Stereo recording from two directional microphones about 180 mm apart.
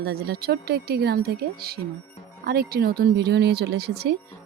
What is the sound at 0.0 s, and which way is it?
Speech, 60° right (ahead or behind).